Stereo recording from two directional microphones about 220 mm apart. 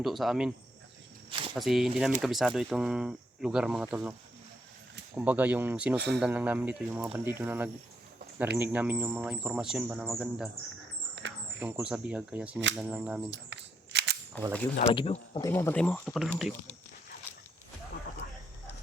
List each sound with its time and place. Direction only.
0.0 s speech: centre (ahead or behind)
1.3 s speech: 25° right (ahead or behind)
1.5 s speech: centre (ahead or behind)
5.1 s speech: 5° right (ahead or behind)
6.0 s speech: 50° right (ahead or behind)
6.2 s speech: 5° right (ahead or behind)
11.1 s a sound: 55° right (ahead or behind)
11.6 s speech: 5° right (ahead or behind)
13.3 s cap gun: 50° right (ahead or behind)
14.8 s speech: 25° left (ahead or behind)
15.4 s speech: 10° left (ahead or behind)